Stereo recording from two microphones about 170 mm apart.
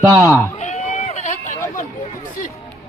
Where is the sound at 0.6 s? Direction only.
40° left (ahead or behind).